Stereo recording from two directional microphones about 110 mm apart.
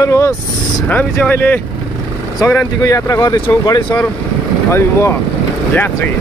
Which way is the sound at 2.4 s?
30° left (ahead or behind).